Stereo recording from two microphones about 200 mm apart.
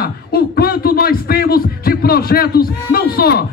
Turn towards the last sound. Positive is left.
turn(degrees=50)  # may be behind; listen again after turning